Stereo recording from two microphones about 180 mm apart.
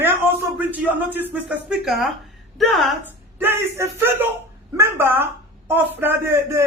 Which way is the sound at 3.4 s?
15° right (ahead or behind).